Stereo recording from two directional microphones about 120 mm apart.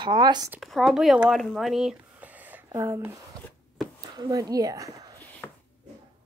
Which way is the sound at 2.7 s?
25° right (ahead or behind).